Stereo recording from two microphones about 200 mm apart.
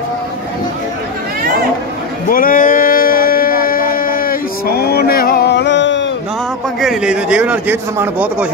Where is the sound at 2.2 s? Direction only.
45° left (ahead or behind); by 6.1 s 65° left (ahead or behind).